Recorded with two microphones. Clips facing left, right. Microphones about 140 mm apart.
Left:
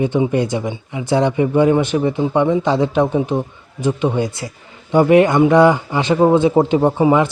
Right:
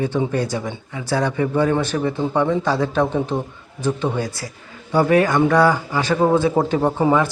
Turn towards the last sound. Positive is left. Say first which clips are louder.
# left 3 dB
turn(degrees=15)  # may be behind; listen again after turning